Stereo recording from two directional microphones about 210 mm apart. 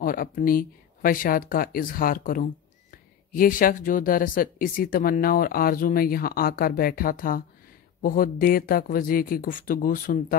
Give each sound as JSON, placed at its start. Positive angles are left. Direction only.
{"t": 0.0, "sound": "speech", "side_deg": 40}